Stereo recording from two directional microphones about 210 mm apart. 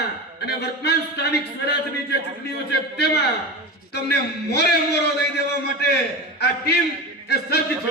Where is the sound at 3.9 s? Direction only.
50° left (ahead or behind).